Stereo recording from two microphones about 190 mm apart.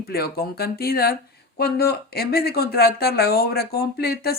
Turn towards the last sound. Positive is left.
turn(degrees=55)  # may be behind; listen again after turning